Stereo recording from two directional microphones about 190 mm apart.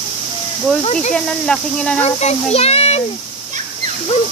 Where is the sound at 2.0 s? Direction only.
35° left (ahead or behind).